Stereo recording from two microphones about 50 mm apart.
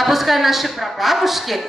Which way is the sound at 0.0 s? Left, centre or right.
Centre.